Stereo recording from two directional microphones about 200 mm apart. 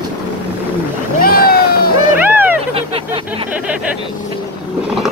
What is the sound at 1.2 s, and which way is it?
Boat, 50° left (ahead or behind).